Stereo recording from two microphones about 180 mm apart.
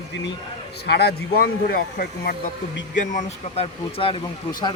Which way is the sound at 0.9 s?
60° left (ahead or behind).